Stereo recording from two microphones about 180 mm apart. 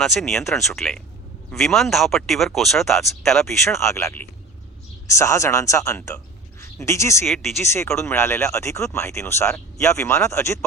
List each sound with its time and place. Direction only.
0.0 s speech: centre (ahead or behind)
3.4 s speech: 15° left (ahead or behind)
7.3 s speech: centre (ahead or behind)
7.6 s speech: 15° left (ahead or behind)